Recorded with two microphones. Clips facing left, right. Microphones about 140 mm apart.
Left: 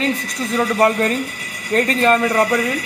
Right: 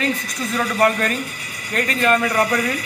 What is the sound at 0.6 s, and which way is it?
Speech, 25° left (ahead or behind).